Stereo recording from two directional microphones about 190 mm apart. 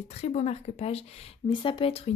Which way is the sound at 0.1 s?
35° left (ahead or behind).